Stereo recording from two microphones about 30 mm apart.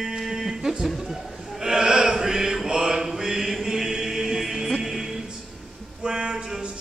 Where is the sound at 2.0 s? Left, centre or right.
Centre.